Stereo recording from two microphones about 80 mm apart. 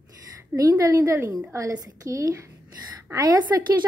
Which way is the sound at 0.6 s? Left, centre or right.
Right.